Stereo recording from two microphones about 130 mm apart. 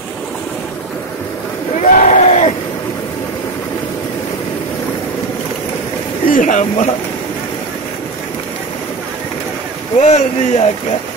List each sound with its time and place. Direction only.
1.8 s crowd: 70° left (ahead or behind)
6.2 s speech: 85° left
9.9 s a man's voice: 65° left (ahead or behind)